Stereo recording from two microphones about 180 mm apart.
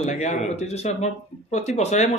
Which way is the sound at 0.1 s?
40° left (ahead or behind).